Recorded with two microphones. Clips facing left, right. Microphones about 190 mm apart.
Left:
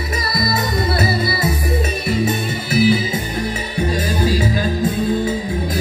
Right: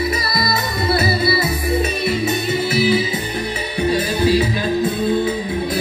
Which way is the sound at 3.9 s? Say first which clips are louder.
Right 4 dB; 45° left (ahead or behind).